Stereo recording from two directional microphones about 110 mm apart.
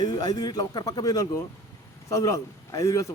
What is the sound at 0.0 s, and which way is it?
A man's voice, 40° left (ahead or behind).